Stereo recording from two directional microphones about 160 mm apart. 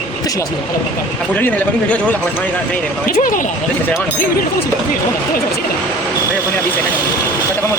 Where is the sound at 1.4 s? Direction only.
10° left (ahead or behind).